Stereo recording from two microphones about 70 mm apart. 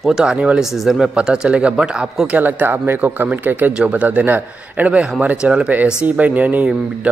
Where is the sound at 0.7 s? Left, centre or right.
Centre.